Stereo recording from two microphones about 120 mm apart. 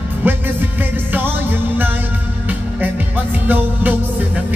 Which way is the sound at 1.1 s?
15° right (ahead or behind).